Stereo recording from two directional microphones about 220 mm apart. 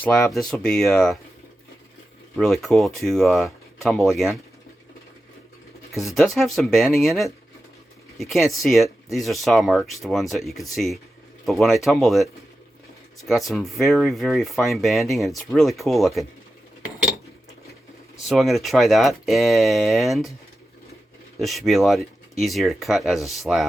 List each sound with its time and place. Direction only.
0.0 s speech: centre (ahead or behind)
2.3 s speech: centre (ahead or behind)
6.1 s speech: centre (ahead or behind)
18.2 s speech: centre (ahead or behind)
21.3 s speech: centre (ahead or behind)